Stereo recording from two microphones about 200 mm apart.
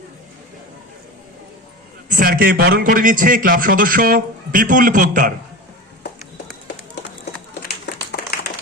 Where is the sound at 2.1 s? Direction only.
45° right (ahead or behind).